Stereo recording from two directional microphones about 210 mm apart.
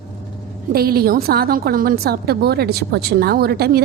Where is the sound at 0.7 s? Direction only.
45° right (ahead or behind).